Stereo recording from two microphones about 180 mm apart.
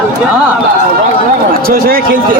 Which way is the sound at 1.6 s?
55° right (ahead or behind).